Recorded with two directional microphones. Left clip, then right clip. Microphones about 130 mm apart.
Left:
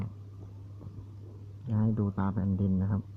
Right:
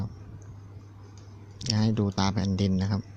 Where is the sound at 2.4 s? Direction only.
75° right (ahead or behind).